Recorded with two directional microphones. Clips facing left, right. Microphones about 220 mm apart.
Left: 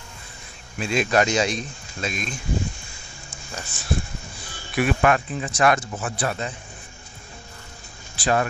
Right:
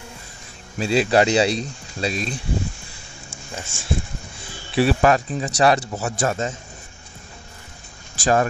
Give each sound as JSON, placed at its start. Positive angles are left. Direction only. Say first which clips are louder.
{"t": 0.7, "sound": "speech", "louder": "right 4 dB", "side_deg": -35}
{"t": 3.5, "sound": "speech", "louder": "right 1 dB", "side_deg": -25}
{"t": 8.2, "sound": "speech", "louder": "right 3 dB", "side_deg": -40}